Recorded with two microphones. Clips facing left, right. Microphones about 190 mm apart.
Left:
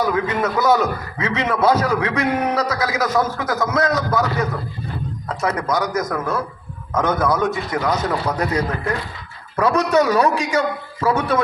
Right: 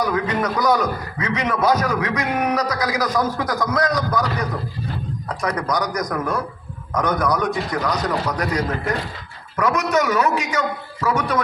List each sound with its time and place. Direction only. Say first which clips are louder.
0.0 s a man's voice: left 1 dB; 25° left (ahead or behind)
9.6 s a man's voice: left 3 dB; 30° left (ahead or behind)